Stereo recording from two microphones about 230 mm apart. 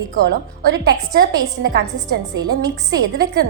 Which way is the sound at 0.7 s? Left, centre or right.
Right.